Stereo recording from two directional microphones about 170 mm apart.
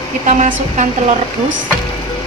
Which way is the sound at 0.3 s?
45° right (ahead or behind).